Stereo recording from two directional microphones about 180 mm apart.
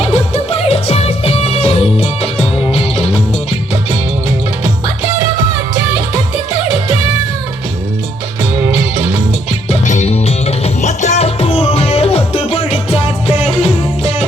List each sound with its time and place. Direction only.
0.0 s music: 35° left (ahead or behind)
4.6 s music: 15° right (ahead or behind)
8.5 s music: 15° right (ahead or behind)
9.6 s music: 40° left (ahead or behind)